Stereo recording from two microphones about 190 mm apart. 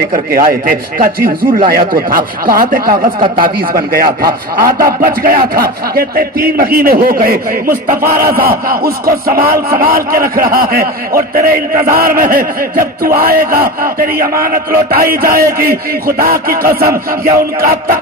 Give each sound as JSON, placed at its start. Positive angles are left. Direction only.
{"t": 0.1, "sound": "speech", "side_deg": -50}